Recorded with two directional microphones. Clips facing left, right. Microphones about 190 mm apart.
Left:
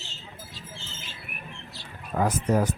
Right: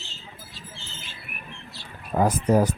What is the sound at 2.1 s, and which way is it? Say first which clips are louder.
Speech: right 4 dB; 35° right (ahead or behind).